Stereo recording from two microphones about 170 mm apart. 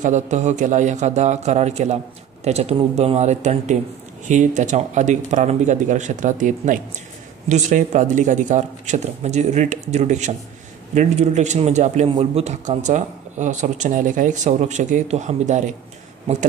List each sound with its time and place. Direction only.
0.0 s a man's voice: 45° right (ahead or behind)